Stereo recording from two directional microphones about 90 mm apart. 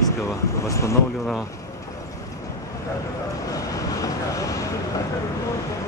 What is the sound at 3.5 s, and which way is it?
Vehicle, 40° left (ahead or behind).